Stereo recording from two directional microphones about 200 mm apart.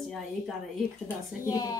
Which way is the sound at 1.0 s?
15° left (ahead or behind).